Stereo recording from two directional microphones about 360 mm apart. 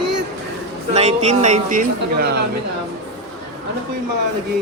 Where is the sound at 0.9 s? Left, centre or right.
Centre.